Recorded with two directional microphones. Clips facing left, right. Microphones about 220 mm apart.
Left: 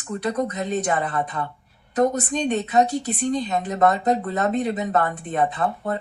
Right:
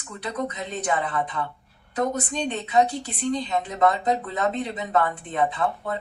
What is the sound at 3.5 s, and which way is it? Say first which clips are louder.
Speech: left 1 dB; 45° left (ahead or behind).